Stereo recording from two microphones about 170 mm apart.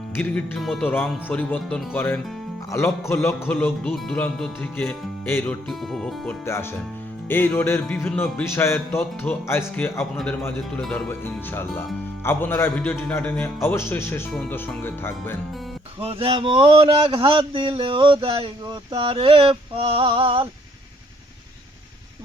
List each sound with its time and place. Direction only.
0.2 s a man's voice: 5° left (ahead or behind)
5.6 s speech: centre (ahead or behind)
6.4 s a man's voice: 15° left (ahead or behind)
16.0 s speech: 30° right (ahead or behind)